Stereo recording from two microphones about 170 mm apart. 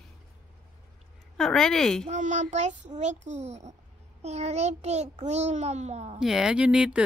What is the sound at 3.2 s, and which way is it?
A child's voice, 40° right (ahead or behind).